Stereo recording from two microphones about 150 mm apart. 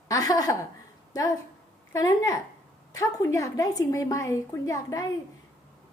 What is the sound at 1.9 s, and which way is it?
Speech, 25° left (ahead or behind).